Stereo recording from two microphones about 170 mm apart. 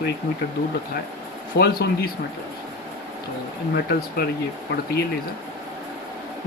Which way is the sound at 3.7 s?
65° left (ahead or behind).